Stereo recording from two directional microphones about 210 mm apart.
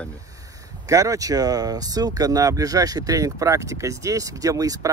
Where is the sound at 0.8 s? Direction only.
15° right (ahead or behind).